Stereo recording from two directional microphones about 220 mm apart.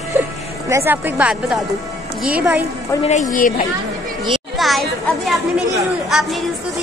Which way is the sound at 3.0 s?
35° left (ahead or behind).